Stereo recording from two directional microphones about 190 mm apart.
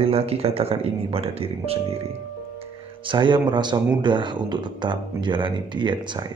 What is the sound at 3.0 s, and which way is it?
Speech, 25° right (ahead or behind).